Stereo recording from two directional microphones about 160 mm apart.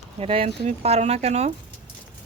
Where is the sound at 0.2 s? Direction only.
40° right (ahead or behind).